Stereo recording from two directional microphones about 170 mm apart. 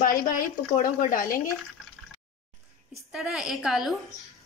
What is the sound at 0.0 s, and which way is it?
A woman's voice, 55° left (ahead or behind).